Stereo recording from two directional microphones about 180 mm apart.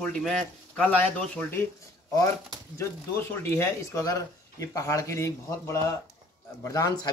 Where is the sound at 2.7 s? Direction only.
15° left (ahead or behind).